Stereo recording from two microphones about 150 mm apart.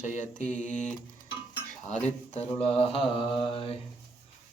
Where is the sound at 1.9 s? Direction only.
50° left (ahead or behind).